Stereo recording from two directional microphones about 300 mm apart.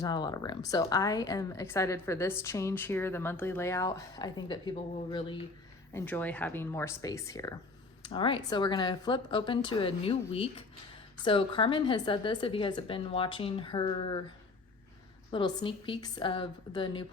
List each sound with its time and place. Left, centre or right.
0.0 s a woman's voice: centre
5.9 s a woman's voice: centre
15.3 s a woman's voice: centre